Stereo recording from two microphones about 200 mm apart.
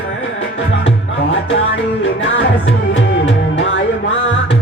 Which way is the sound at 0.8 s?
65° left (ahead or behind).